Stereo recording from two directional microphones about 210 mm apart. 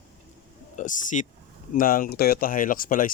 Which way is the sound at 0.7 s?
35° left (ahead or behind).